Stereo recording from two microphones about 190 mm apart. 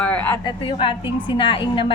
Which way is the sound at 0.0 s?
10° left (ahead or behind).